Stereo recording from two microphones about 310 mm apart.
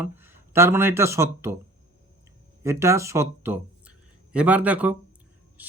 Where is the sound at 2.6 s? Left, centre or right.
Centre.